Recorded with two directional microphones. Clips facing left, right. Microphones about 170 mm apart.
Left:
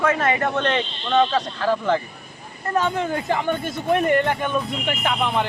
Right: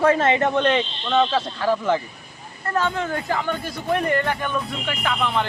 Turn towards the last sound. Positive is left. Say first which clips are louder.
# left 1 dB
turn(degrees=20)  # may be behind; listen again after turning